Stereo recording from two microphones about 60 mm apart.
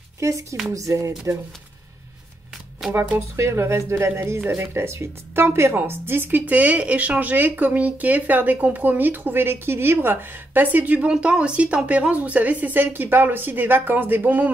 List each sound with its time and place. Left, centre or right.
0.2 s speech: right
2.8 s speech: centre
3.2 s speech: right
11.1 s a woman's voice: centre